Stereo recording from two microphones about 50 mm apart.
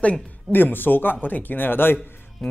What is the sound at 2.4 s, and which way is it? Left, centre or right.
Speech, centre.